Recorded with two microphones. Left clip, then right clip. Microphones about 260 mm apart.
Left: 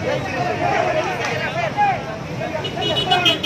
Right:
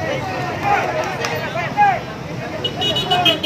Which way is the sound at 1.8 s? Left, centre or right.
Right.